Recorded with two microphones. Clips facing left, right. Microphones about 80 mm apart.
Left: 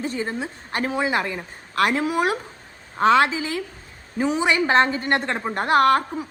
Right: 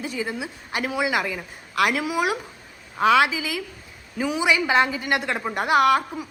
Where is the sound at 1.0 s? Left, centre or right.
Centre.